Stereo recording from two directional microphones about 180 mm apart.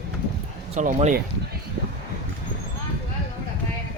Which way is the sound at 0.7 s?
45° right (ahead or behind).